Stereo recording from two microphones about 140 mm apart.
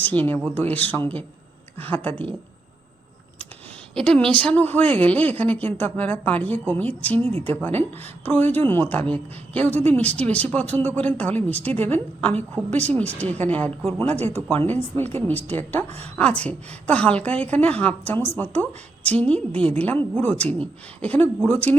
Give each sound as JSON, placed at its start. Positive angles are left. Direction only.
{"t": 0.0, "sound": "speech", "side_deg": 10}
{"t": 3.9, "sound": "speech", "side_deg": 5}
{"t": 7.2, "sound": "speech", "side_deg": -45}
{"t": 7.5, "sound": "speech", "side_deg": 15}
{"t": 14.1, "sound": "speech", "side_deg": -50}
{"t": 15.1, "sound": "speech", "side_deg": 10}